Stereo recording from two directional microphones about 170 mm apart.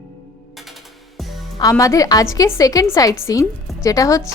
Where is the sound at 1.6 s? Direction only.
20° left (ahead or behind).